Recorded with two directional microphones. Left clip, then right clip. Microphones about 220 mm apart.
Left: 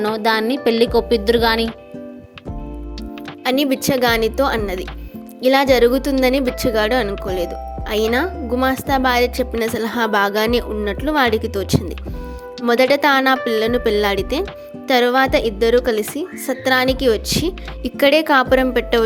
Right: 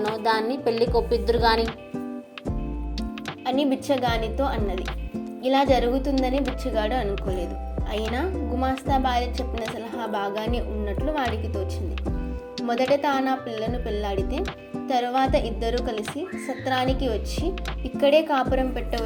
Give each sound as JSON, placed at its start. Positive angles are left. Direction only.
{"t": 0.2, "sound": "speech", "side_deg": 50}
{"t": 3.4, "sound": "speech", "side_deg": 55}